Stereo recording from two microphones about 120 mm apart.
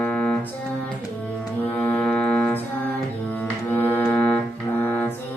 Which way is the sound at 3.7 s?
15° left (ahead or behind).